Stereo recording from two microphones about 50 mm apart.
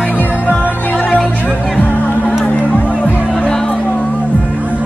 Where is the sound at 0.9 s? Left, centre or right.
Left.